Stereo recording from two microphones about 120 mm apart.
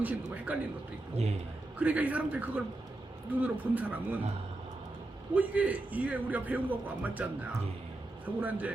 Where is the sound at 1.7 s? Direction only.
10° right (ahead or behind).